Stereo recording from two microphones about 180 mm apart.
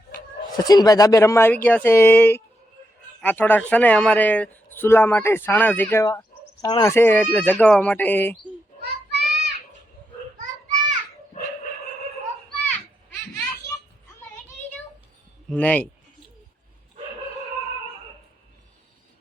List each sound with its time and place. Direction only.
0.5 s speech: 20° left (ahead or behind)
6.9 s speech: 10° left (ahead or behind)
8.8 s children playing: 65° right (ahead or behind)
13.3 s a sound: 20° left (ahead or behind)
15.4 s speech: 10° left (ahead or behind)